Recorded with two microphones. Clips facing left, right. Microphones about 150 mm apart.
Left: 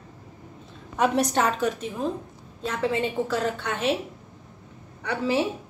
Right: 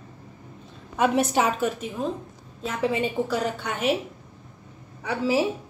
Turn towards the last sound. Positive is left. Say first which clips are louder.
# right 1 dB
turn(degrees=-5)  # may be behind; listen again after turning